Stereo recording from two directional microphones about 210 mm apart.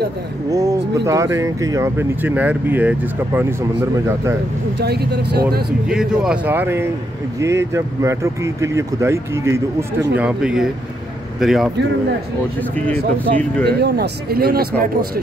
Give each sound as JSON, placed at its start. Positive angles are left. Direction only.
{"t": 0.5, "sound": "speech", "side_deg": -15}
{"t": 4.7, "sound": "a man's voice", "side_deg": -50}
{"t": 5.9, "sound": "speech", "side_deg": 0}
{"t": 12.7, "sound": "speech", "side_deg": 5}
{"t": 13.7, "sound": "a man's voice", "side_deg": -50}